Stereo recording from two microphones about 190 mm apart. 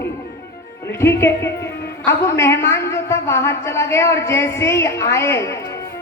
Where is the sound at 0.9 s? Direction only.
15° left (ahead or behind).